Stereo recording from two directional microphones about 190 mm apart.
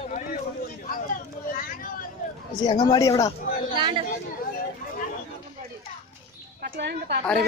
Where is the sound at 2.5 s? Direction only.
20° left (ahead or behind).